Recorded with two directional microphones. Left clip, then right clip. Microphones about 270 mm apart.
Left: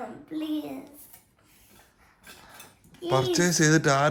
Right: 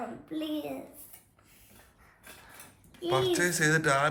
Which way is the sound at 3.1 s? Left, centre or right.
Left.